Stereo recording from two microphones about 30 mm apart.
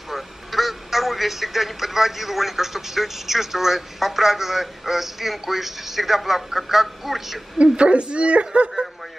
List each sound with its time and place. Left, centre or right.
0.1 s a man's voice: centre
7.6 s speech: right